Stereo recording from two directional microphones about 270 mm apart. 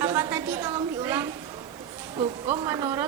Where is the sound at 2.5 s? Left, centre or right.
Centre.